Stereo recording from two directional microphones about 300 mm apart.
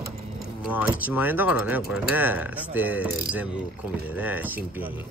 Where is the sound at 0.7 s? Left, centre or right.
Centre.